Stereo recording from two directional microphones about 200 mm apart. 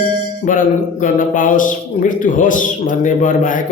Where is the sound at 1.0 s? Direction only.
40° left (ahead or behind).